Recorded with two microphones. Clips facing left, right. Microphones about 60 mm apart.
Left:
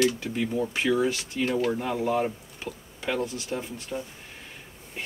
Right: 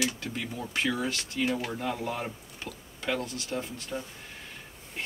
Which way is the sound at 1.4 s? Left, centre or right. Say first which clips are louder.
Left 7 dB; centre.